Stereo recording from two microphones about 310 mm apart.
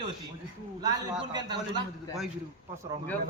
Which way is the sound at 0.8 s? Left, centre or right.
Centre.